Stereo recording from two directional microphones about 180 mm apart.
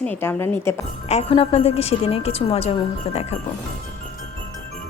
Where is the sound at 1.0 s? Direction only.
35° left (ahead or behind).